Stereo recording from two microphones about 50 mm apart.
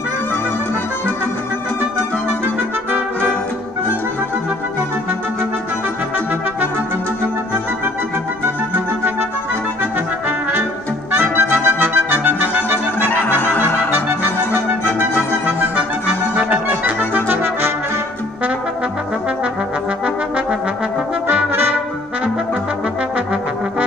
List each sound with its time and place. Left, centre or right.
2.4 s music: right
9.9 s trumpet: right
11.1 s music: right
15.7 s accordion: right
17.3 s brass instrument: right